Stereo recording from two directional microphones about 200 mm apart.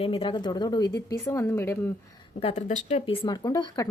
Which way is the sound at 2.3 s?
30° left (ahead or behind).